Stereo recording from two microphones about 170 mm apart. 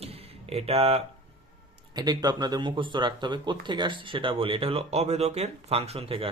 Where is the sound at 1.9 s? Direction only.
25° right (ahead or behind).